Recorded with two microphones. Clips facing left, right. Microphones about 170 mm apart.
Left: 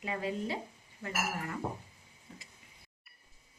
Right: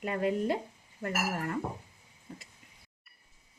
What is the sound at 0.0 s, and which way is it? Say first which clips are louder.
Speech: right 6 dB; 55° right (ahead or behind).